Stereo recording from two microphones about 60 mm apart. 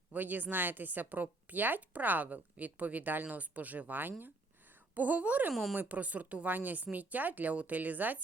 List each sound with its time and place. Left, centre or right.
0.1 s a woman's voice: right